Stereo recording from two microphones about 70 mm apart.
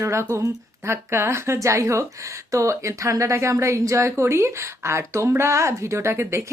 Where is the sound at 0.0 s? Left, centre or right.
Right.